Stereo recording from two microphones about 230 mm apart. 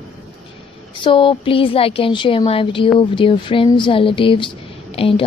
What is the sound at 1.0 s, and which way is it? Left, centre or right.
A woman's voice, left.